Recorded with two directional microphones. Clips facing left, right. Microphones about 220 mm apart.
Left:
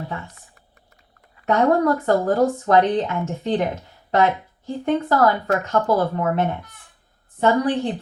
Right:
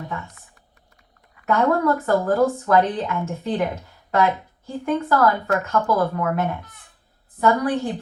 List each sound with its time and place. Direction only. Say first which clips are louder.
1.4 s speech: left 2 dB; 25° left (ahead or behind)